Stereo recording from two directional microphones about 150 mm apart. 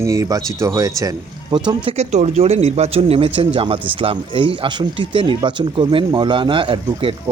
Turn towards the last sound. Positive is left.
turn(degrees=-35)  # may be behind; listen again after turning